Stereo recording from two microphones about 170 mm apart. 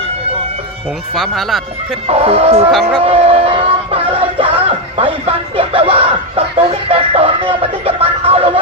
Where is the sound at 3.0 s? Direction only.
35° right (ahead or behind).